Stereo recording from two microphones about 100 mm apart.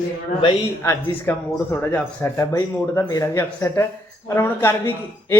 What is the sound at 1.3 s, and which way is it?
A man's voice, 25° left (ahead or behind).